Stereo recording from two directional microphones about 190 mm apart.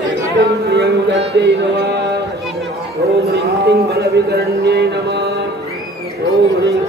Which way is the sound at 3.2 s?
55° right (ahead or behind).